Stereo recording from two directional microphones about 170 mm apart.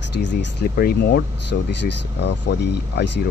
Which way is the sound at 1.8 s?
90° left.